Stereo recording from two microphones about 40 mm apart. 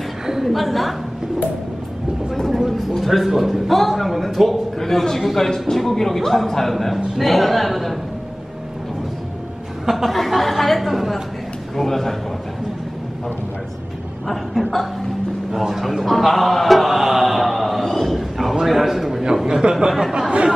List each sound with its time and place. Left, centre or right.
0.5 s a man's voice: centre
2.5 s a man's voice: centre
4.7 s a man's voice: centre
9.8 s chuckle: centre
10.1 s a man's voice: centre
14.2 s a man's voice: centre
15.5 s music: centre
19.4 s speech: centre